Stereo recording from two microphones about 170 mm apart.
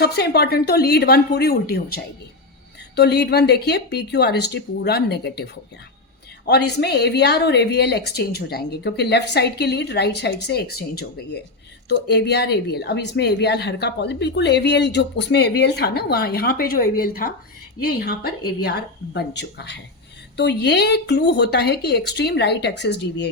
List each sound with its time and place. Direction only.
0.0 s speech: 70° left (ahead or behind)
2.9 s speech: 75° left (ahead or behind)
11.9 s speech: 75° left (ahead or behind)